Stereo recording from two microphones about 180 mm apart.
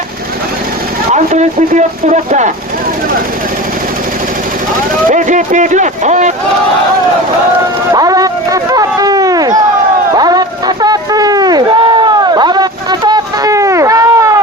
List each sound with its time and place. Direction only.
1.1 s speech: 40° right (ahead or behind)
5.0 s speech: 45° right (ahead or behind)
7.9 s a sound: 20° right (ahead or behind)